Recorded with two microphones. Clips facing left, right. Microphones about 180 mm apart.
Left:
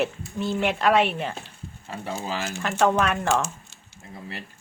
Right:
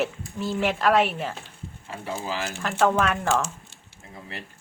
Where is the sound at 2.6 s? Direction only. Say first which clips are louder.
Even; centre (ahead or behind).